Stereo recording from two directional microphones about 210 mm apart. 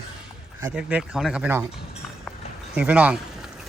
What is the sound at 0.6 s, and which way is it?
Speech, 5° right (ahead or behind).